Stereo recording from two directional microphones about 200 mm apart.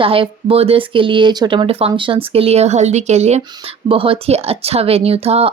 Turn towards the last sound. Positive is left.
turn(degrees=-30)  # may be behind; listen again after turning